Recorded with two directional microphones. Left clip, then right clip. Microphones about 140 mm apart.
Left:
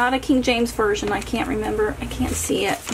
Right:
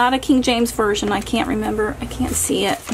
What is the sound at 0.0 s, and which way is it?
Speech, 30° right (ahead or behind).